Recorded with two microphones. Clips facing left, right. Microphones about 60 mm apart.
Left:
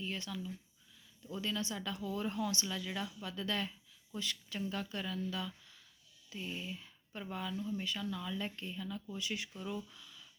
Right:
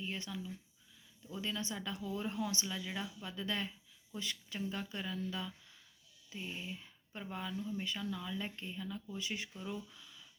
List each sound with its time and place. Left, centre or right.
0.0 s speech: centre